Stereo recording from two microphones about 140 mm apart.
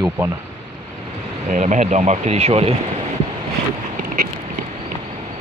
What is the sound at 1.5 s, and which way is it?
Speech, 60° right (ahead or behind).